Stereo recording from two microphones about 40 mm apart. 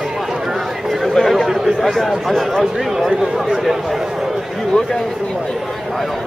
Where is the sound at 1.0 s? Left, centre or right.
Centre.